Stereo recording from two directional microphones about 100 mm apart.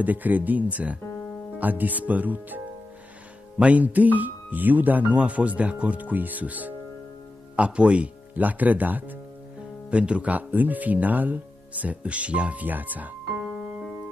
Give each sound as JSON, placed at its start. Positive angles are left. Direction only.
{"t": 0.0, "sound": "speech", "side_deg": -15}